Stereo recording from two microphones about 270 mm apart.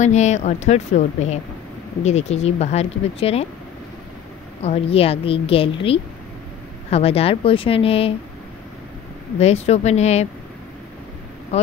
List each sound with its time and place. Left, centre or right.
0.0 s speech: left
4.6 s speech: left
9.4 s speech: left
11.5 s speech: left